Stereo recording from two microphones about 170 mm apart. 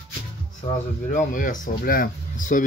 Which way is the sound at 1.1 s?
50° left (ahead or behind).